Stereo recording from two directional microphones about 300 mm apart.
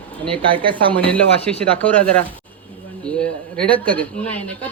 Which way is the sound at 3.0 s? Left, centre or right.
Centre.